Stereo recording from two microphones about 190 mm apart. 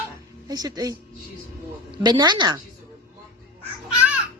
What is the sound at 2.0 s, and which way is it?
Child singing, 20° right (ahead or behind).